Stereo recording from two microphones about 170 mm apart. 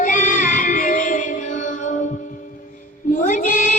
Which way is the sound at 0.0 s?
50° left (ahead or behind).